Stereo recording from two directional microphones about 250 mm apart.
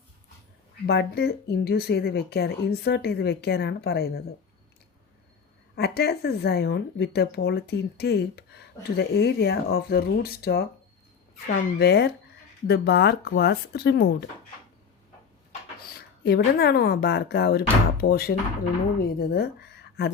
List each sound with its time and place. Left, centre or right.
0.9 s speech: left
5.7 s speech: left
15.9 s a woman's voice: left